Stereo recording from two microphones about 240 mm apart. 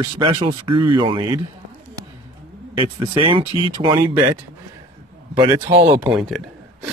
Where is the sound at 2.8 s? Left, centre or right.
Right.